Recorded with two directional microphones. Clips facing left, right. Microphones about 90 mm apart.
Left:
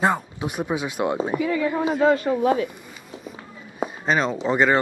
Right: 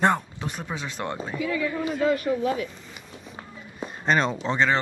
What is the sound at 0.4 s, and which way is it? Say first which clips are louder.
Speech: left 7 dB; 15° left (ahead or behind).